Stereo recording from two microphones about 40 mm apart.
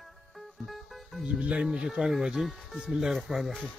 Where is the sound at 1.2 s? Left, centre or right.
Right.